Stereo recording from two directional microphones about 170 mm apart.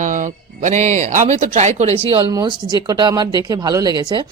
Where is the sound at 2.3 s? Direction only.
25° right (ahead or behind).